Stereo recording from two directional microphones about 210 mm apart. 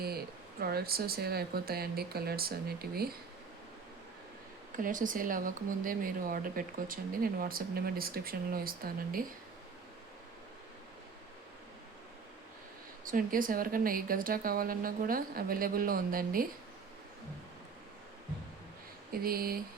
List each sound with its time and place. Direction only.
0.6 s speech: 45° right (ahead or behind)
4.8 s speech: 40° right (ahead or behind)
13.1 s speech: 40° right (ahead or behind)
19.1 s speech: 45° right (ahead or behind)